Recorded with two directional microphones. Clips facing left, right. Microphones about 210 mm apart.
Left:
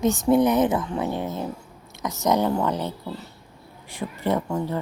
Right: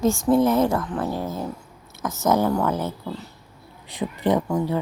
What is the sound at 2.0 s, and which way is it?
Speech, centre (ahead or behind).